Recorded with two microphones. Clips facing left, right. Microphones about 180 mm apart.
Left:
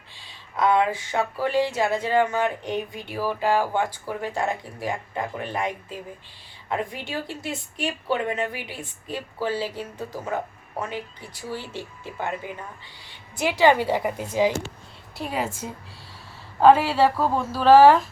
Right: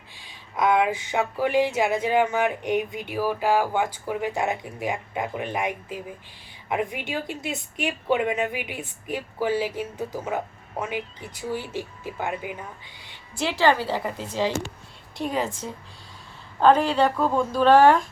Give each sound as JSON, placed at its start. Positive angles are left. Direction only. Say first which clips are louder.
{"t": 0.1, "sound": "speech", "louder": "even", "side_deg": -15}
{"t": 13.4, "sound": "a woman's voice", "louder": "left 2 dB", "side_deg": 15}